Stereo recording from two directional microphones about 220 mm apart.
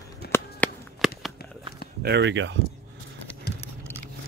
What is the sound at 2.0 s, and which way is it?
Speech, 50° right (ahead or behind).